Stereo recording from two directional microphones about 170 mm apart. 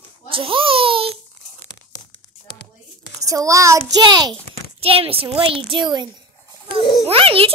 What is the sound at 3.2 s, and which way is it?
A child's voice, 20° right (ahead or behind).